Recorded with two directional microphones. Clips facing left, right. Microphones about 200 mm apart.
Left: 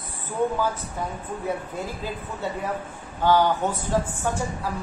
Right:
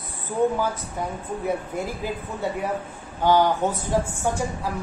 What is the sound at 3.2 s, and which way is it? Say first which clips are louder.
Speech: right 1 dB; 15° right (ahead or behind).